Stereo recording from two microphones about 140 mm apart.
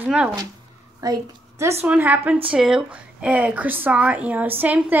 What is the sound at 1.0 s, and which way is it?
Speech, 20° right (ahead or behind).